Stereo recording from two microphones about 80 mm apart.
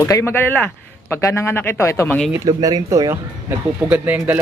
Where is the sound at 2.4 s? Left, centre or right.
Right.